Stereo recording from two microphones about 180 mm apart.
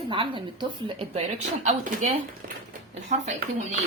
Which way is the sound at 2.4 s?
60° right (ahead or behind).